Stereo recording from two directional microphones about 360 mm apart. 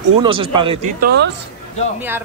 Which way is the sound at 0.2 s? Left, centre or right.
Centre.